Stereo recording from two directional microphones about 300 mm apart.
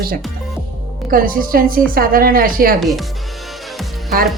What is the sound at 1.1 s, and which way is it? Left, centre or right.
Speech, right.